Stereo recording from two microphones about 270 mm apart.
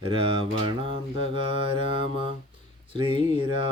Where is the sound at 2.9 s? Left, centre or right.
Centre.